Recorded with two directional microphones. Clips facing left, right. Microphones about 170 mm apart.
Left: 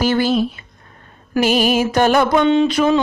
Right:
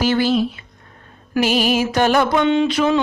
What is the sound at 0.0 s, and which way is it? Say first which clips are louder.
Speech: left 1 dB; 45° left (ahead or behind).